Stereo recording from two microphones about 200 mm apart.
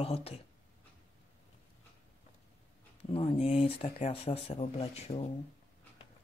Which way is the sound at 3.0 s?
30° left (ahead or behind).